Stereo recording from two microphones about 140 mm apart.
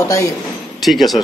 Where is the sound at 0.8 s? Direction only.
Centre (ahead or behind).